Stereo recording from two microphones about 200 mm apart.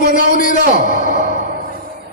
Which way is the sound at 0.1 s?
40° left (ahead or behind).